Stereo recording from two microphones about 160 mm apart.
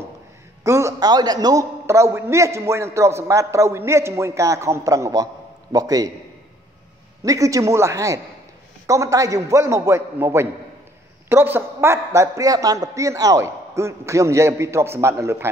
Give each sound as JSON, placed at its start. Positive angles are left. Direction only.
{"t": 0.7, "sound": "a man's voice", "side_deg": -20}
{"t": 7.2, "sound": "a man's voice", "side_deg": -20}